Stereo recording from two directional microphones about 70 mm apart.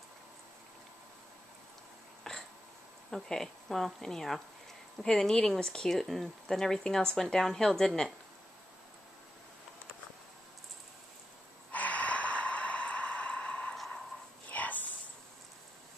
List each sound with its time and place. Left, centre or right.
2.3 s hiccup: centre
3.1 s speech: centre
11.7 s snort: left
13.7 s a sound: centre
14.5 s whispering: left